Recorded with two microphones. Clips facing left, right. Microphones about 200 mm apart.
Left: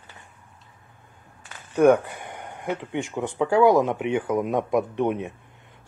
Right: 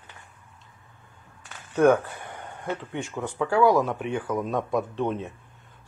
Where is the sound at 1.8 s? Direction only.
15° left (ahead or behind).